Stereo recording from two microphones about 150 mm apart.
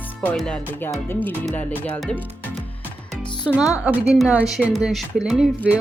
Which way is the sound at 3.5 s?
Centre (ahead or behind).